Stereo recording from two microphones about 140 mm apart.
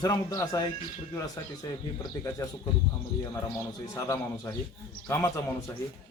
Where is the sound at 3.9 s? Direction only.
20° left (ahead or behind).